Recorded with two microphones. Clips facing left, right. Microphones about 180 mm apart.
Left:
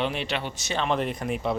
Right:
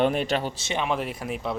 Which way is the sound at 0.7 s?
5° right (ahead or behind).